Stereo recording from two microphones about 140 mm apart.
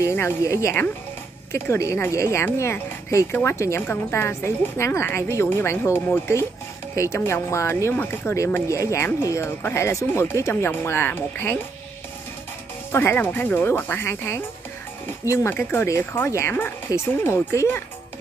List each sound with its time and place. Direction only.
0.0 s speech: 20° left (ahead or behind)
12.9 s speech: 15° left (ahead or behind)